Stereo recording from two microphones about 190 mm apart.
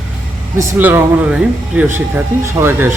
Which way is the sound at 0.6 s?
10° right (ahead or behind).